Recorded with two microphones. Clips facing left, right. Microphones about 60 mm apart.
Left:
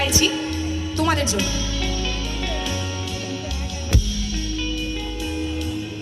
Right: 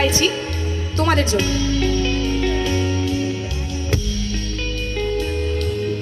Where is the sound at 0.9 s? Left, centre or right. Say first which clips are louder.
Right 4 dB; right.